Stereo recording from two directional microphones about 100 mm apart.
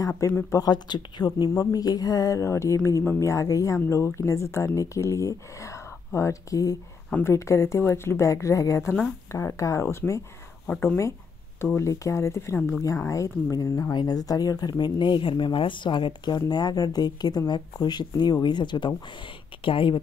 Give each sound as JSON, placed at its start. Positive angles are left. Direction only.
{"t": 0.5, "sound": "speech", "side_deg": 40}
{"t": 1.5, "sound": "a woman's voice", "side_deg": 35}
{"t": 11.6, "sound": "a woman's voice", "side_deg": 25}